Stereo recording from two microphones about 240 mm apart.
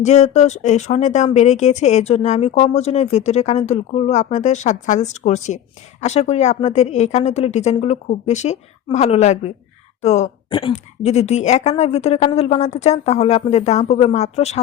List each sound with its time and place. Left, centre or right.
0.0 s speech: left